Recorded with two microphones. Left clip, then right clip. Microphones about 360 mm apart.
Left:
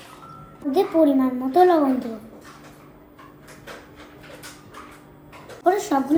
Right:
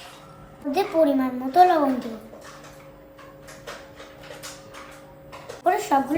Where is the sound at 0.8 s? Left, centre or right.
Right.